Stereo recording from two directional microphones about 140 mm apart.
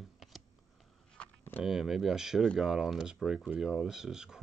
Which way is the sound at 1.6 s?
Centre (ahead or behind).